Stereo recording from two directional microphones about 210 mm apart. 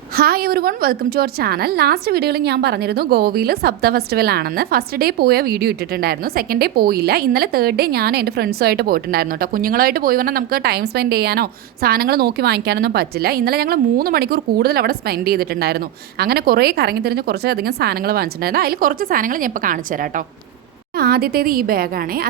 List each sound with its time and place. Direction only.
0.2 s a woman's voice: 45° right (ahead or behind)
21.0 s a woman's voice: 45° right (ahead or behind)